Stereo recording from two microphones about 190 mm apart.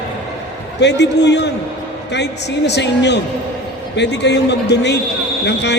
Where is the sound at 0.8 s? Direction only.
65° left (ahead or behind).